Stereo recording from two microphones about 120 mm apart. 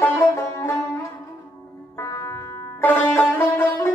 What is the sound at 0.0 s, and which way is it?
Music, 20° left (ahead or behind).